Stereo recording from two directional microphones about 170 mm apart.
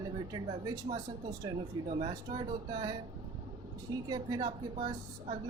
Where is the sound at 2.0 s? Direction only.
25° right (ahead or behind).